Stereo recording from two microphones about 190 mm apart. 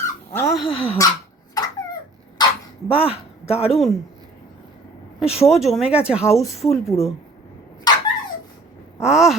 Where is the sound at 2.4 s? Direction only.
20° left (ahead or behind).